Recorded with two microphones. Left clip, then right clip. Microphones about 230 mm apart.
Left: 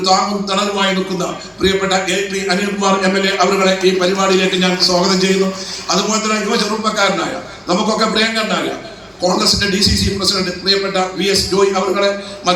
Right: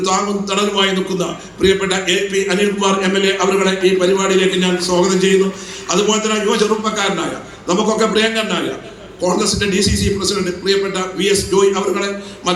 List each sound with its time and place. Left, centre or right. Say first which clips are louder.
0.0 s a man's voice: left 3 dB; right